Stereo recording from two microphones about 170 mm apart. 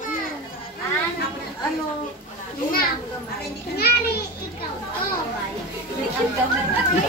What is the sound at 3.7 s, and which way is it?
Speech, 65° left (ahead or behind).